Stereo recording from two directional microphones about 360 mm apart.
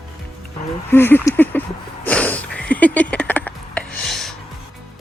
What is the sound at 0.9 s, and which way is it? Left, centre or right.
Speech, centre.